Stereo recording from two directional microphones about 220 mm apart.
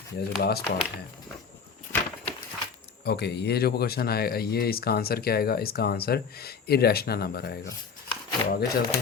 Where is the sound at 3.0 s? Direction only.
50° left (ahead or behind).